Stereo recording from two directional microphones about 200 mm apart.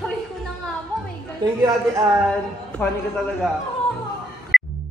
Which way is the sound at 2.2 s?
5° left (ahead or behind).